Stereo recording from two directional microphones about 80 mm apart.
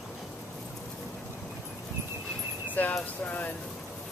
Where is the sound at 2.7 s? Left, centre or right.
Left.